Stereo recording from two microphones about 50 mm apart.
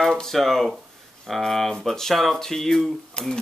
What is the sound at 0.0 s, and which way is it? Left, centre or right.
Speech, centre.